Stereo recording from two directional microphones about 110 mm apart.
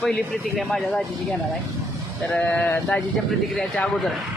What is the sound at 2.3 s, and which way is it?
Speech, 15° left (ahead or behind).